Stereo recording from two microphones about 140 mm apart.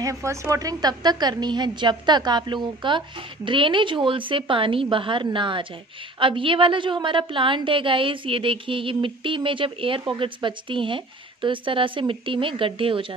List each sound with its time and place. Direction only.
0.0 s a woman's voice: 20° right (ahead or behind); by 13.0 s 40° right (ahead or behind)